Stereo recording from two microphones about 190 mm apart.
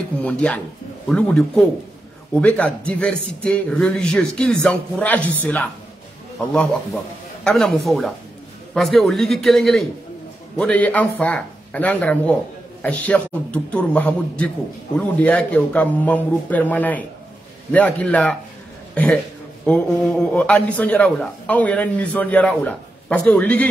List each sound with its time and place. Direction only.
0.2 s a man's voice: 5° left (ahead or behind)
19.6 s a man's voice: 5° left (ahead or behind)